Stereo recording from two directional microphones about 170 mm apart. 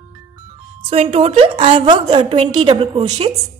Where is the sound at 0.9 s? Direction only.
35° right (ahead or behind).